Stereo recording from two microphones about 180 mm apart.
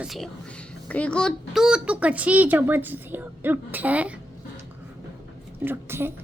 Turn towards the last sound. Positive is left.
turn(degrees=-15)  # may be behind; listen again after turning